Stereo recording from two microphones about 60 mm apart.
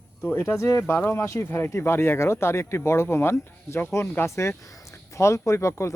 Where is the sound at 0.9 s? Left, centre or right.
Left.